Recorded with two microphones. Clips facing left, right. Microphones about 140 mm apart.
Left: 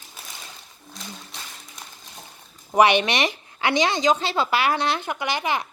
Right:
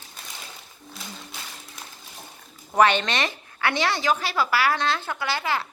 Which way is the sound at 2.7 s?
15° left (ahead or behind).